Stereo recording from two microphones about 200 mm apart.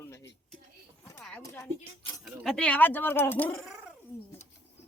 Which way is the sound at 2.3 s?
Centre (ahead or behind).